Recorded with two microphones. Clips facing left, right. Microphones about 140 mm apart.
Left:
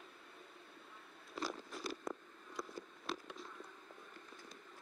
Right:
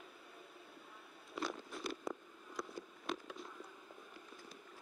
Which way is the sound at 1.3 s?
Centre (ahead or behind).